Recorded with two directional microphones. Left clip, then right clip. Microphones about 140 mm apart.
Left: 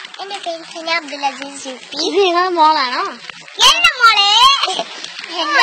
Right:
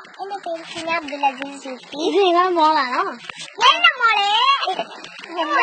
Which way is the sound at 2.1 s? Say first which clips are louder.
Left 2 dB; 40° right (ahead or behind).